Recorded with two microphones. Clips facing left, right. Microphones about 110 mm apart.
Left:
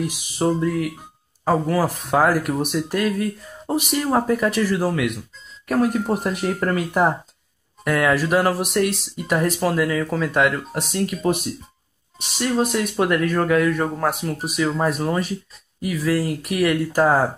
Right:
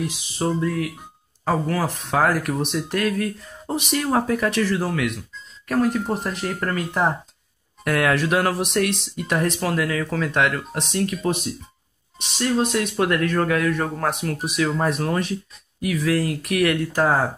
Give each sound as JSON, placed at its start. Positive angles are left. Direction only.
{"t": 0.4, "sound": "speech", "side_deg": 15}
{"t": 0.7, "sound": "speech", "side_deg": 5}